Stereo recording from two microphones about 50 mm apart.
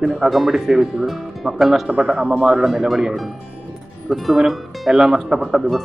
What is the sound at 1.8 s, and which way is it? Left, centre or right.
Speech, right.